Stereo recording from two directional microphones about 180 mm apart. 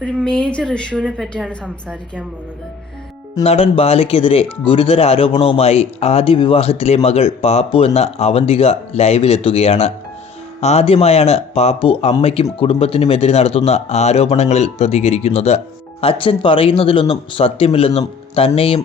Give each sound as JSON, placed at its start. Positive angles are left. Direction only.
{"t": 0.0, "sound": "a woman's voice", "side_deg": 0}
{"t": 3.4, "sound": "speech", "side_deg": 35}